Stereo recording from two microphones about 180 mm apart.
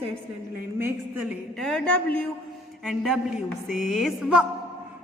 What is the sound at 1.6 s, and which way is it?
Speech, 5° left (ahead or behind).